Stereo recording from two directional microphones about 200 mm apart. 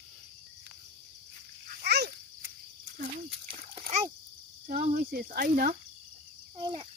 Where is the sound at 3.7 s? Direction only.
30° right (ahead or behind).